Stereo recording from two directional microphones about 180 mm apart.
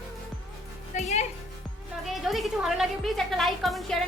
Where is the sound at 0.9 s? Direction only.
40° left (ahead or behind).